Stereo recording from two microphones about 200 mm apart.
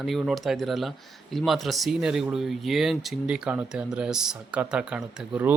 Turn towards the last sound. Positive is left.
turn(degrees=-5)  # may be behind; listen again after turning